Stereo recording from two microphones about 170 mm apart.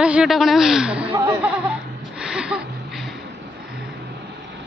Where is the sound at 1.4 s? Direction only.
5° right (ahead or behind).